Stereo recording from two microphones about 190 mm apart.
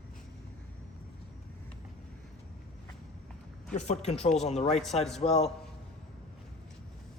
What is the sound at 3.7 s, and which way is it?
Speech, 35° left (ahead or behind).